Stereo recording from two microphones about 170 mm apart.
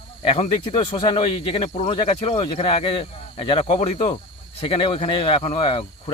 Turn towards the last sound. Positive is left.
turn(degrees=30)  # may be behind; listen again after turning